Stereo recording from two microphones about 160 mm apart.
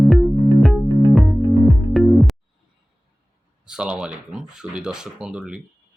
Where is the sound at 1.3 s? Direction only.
25° right (ahead or behind).